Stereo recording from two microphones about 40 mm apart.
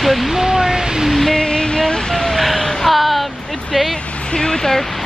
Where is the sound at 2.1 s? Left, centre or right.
Centre.